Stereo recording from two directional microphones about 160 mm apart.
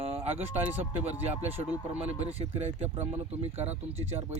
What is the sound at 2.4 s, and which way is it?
Speech, 40° right (ahead or behind).